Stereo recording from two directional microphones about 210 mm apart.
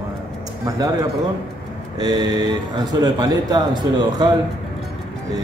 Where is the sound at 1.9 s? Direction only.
20° right (ahead or behind).